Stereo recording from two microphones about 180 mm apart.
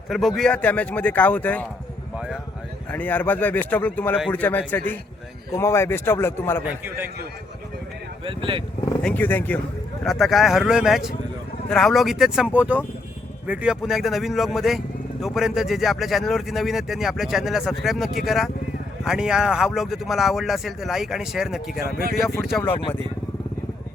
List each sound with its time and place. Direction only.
0.1 s a man's voice: centre (ahead or behind)
2.9 s a man's voice: 10° left (ahead or behind)
6.7 s a man's voice: 10° right (ahead or behind)
8.2 s speech: 30° right (ahead or behind)
9.0 s a man's voice: 10° left (ahead or behind)
10.1 s a man's voice: centre (ahead or behind)
21.8 s speech: 55° left (ahead or behind)
22.6 s a man's voice: 10° left (ahead or behind)